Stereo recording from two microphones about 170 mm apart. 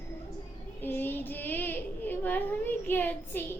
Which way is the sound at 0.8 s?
10° left (ahead or behind).